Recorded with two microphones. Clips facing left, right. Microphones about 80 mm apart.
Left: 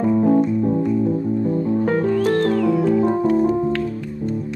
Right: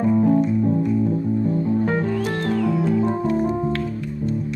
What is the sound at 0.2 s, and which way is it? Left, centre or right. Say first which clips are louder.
Music: left 2 dB; left.